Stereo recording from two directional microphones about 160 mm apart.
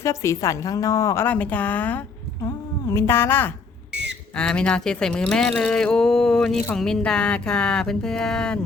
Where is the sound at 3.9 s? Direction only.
90° right.